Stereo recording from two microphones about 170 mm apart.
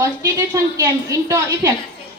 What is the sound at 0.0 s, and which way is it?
A woman's voice, 20° right (ahead or behind).